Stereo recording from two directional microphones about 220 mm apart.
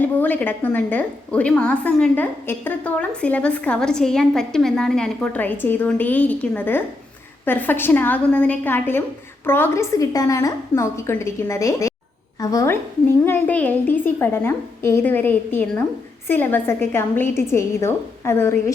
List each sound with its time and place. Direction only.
0.0 s a woman's voice: 10° left (ahead or behind)